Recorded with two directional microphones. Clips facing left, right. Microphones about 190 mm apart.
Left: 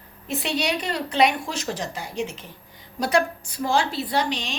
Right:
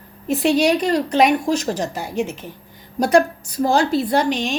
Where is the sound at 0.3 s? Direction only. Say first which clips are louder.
Right 10 dB; 40° right (ahead or behind).